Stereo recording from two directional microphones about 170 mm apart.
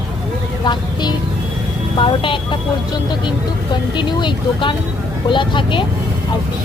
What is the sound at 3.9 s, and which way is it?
Speech, 25° left (ahead or behind).